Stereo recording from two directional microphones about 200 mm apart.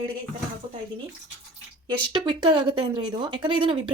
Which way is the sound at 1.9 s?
25° right (ahead or behind).